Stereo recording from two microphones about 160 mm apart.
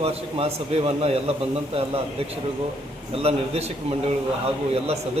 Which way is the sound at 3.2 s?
40° right (ahead or behind).